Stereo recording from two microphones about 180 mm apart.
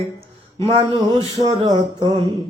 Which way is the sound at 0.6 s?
35° right (ahead or behind).